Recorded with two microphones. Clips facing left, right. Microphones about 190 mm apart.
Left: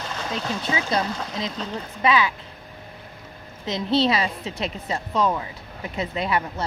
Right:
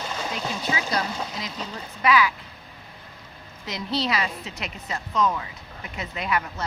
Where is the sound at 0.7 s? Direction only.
25° left (ahead or behind).